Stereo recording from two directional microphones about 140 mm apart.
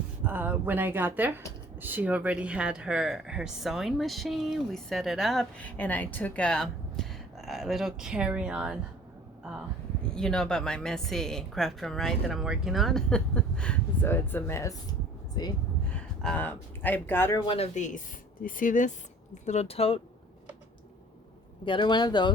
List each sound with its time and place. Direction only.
0.3 s a woman's voice: 15° right (ahead or behind)
5.6 s a woman's voice: 10° left (ahead or behind); by 8.8 s 5° right (ahead or behind)
10.2 s a woman's voice: 5° left (ahead or behind); by 15.5 s 30° left (ahead or behind)
16.2 s speech: 10° left (ahead or behind)
17.3 s speech: 30° left (ahead or behind)
17.6 s speech: 60° left (ahead or behind)
18.4 s speech: 70° left (ahead or behind); by 20.0 s 45° left (ahead or behind)
21.6 s speech: 35° left (ahead or behind)